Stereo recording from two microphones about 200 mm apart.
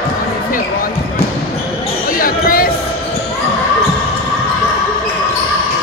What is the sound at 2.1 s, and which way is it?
Basketball bounce, 45° left (ahead or behind).